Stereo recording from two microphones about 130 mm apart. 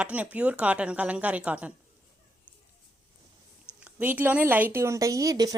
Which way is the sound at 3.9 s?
15° right (ahead or behind).